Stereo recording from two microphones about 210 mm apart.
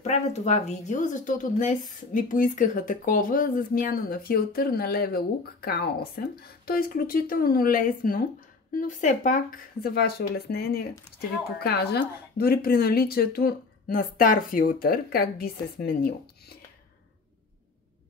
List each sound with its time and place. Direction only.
0.0 s speech: 30° left (ahead or behind)